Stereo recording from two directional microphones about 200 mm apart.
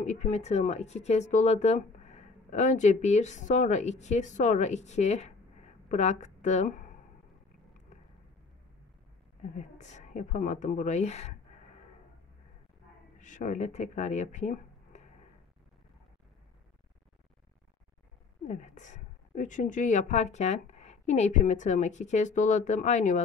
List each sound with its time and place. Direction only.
0.0 s speech: 35° left (ahead or behind)
9.6 s speech: 35° left (ahead or behind)
13.2 s speech: 40° left (ahead or behind)
18.5 s speech: 40° left (ahead or behind)